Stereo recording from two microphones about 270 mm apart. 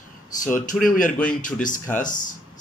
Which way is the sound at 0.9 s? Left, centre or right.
Left.